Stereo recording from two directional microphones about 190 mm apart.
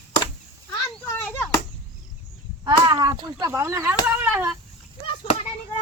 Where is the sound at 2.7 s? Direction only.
20° right (ahead or behind).